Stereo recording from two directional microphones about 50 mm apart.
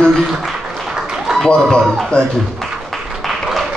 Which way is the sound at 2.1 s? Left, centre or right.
Left.